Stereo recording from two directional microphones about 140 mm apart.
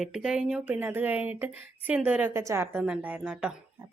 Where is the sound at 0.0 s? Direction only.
5° right (ahead or behind).